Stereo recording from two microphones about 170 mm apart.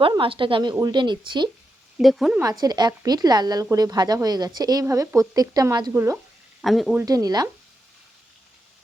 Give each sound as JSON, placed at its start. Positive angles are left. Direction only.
{"t": 0.0, "sound": "speech", "side_deg": -30}
{"t": 2.0, "sound": "speech", "side_deg": 0}
{"t": 2.4, "sound": "speech", "side_deg": -20}
{"t": 6.6, "sound": "speech", "side_deg": 0}
{"t": 7.0, "sound": "speech", "side_deg": -20}